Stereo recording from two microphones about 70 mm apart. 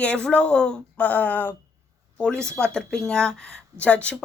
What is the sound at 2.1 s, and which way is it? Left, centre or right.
A woman's voice, centre.